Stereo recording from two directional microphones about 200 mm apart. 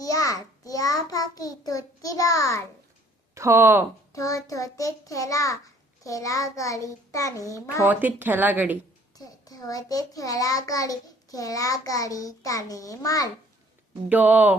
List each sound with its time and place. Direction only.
0.0 s child singing: 15° left (ahead or behind)
3.3 s speech: 15° right (ahead or behind)
4.1 s a child's voice: 15° left (ahead or behind)
7.9 s speech: 10° right (ahead or behind)
9.1 s a child's voice: 20° left (ahead or behind)
14.1 s speech: 10° right (ahead or behind)